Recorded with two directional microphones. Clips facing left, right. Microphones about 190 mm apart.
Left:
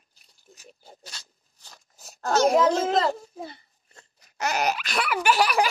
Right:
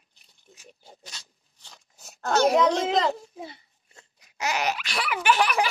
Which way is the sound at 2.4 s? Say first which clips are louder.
Left 1 dB; 5° left (ahead or behind).